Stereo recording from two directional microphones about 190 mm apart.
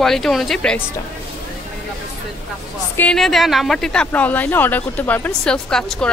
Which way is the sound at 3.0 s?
5° left (ahead or behind).